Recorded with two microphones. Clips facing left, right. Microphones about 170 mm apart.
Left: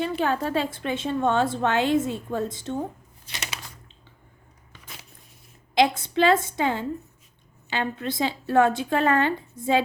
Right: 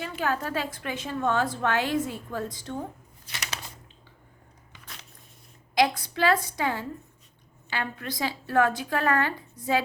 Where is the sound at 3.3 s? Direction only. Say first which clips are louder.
Left 2 dB; 25° left (ahead or behind).